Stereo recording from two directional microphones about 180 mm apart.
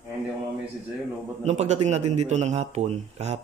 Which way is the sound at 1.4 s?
40° right (ahead or behind).